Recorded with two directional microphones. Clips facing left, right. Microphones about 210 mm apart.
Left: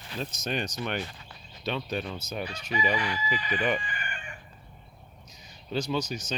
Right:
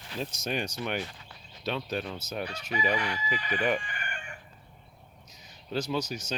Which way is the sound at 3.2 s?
50° right (ahead or behind).